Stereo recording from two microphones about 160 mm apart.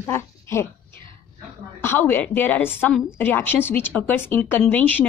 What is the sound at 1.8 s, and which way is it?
A woman's voice, 10° left (ahead or behind).